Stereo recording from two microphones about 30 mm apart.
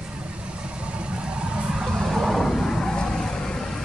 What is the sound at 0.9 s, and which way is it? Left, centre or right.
Vehicle, right.